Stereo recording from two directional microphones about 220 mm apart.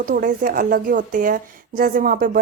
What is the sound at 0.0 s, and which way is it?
Speech, 40° right (ahead or behind).